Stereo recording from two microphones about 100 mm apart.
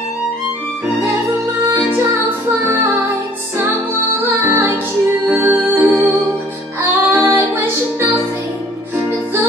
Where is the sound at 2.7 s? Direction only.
25° right (ahead or behind).